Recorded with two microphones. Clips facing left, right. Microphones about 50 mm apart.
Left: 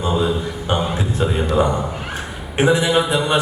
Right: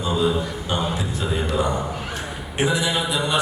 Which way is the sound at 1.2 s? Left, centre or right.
Left.